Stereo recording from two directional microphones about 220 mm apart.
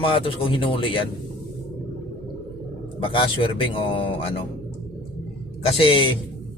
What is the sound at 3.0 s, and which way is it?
Speech, 25° left (ahead or behind).